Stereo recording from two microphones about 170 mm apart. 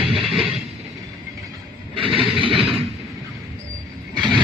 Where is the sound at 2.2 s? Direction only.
30° right (ahead or behind).